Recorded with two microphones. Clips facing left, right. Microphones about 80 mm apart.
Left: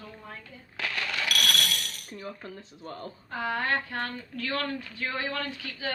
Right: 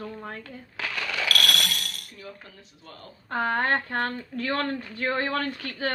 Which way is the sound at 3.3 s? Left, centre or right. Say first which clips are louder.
Right 4 dB; right.